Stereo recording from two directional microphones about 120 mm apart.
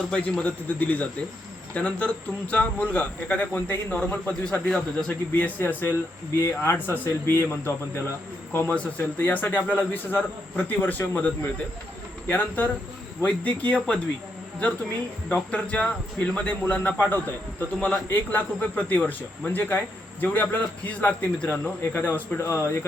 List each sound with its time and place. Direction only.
0.1 s speech: 10° left (ahead or behind)
12.3 s speech: 15° left (ahead or behind)
15.3 s speech: 10° left (ahead or behind)